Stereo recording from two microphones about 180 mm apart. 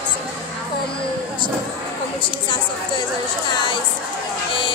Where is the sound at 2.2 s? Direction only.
25° left (ahead or behind).